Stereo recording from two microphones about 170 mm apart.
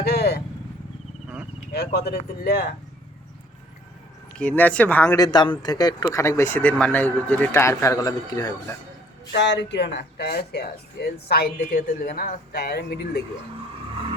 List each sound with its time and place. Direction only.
0.0 s vehicle: 70° left (ahead or behind)
1.7 s speech: 70° left (ahead or behind)
4.4 s speech: 10° left (ahead or behind)
5.1 s speech: 25° left (ahead or behind)
9.3 s speech: 90° left; by 13.2 s 75° left (ahead or behind)